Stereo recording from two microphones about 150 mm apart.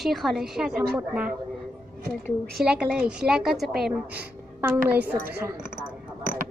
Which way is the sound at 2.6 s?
5° right (ahead or behind).